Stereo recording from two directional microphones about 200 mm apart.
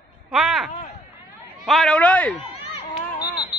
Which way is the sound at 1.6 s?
Centre (ahead or behind).